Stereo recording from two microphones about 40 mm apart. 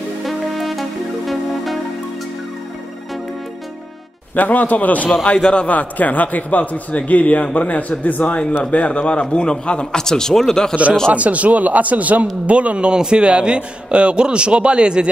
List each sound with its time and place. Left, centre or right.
0.2 s music: centre
4.4 s a man's voice: left
5.2 s a man's voice: left
5.7 s a man's voice: left
9.9 s speech: centre
11.1 s a man's voice: right